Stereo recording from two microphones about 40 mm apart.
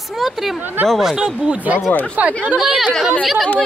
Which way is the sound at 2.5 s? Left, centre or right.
Centre.